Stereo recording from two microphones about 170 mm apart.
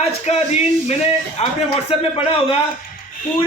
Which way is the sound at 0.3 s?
40° left (ahead or behind).